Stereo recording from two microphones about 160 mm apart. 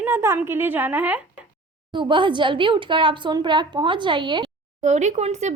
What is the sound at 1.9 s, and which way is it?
Speech, 30° right (ahead or behind).